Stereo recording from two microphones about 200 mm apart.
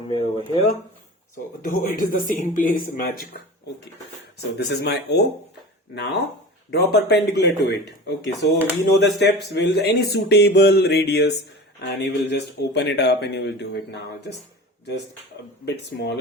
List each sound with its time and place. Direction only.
0.1 s speech: 25° left (ahead or behind)
1.6 s speech: 45° left (ahead or behind); by 14.3 s 60° left (ahead or behind)
15.6 s speech: 60° left (ahead or behind)